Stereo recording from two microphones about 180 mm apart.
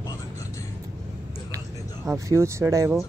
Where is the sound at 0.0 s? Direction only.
20° left (ahead or behind).